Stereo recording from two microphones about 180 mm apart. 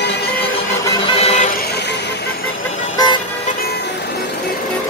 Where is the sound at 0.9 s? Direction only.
30° left (ahead or behind).